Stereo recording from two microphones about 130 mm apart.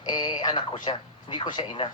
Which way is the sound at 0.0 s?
35° left (ahead or behind).